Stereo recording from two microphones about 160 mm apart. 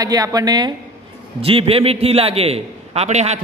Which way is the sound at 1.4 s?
35° right (ahead or behind).